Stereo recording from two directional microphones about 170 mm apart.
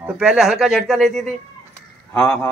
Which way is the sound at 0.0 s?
5° right (ahead or behind).